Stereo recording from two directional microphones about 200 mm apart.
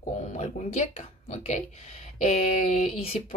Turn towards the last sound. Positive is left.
turn(degrees=35)  # may be behind; listen again after turning